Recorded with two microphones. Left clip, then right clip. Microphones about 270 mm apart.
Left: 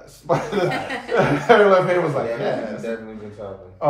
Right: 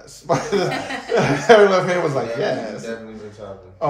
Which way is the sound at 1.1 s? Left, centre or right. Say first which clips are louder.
Right 2 dB; right.